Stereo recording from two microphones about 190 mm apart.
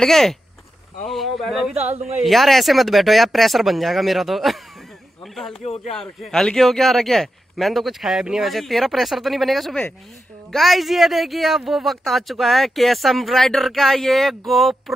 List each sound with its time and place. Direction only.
0.0 s speech: centre (ahead or behind)
5.6 s speech: 30° left (ahead or behind)
5.9 s speech: 5° left (ahead or behind)